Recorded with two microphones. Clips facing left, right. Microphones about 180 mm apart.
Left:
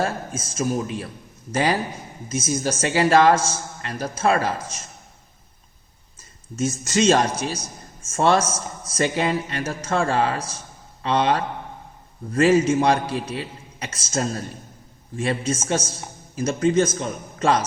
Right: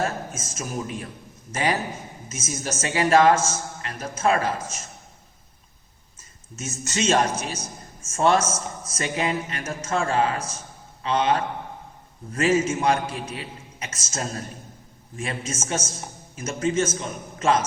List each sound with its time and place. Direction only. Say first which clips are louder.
0.0 s a man's voice: left 2 dB; 30° left (ahead or behind)
6.1 s a man's voice: left 12 dB; 35° left (ahead or behind)